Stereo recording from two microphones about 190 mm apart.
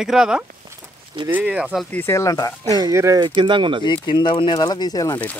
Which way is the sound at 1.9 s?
15° left (ahead or behind).